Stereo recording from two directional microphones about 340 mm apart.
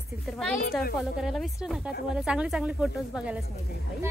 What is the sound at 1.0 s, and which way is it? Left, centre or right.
A woman's voice, centre.